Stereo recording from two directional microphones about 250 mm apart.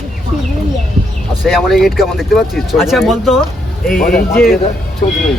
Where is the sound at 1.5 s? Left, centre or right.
Centre.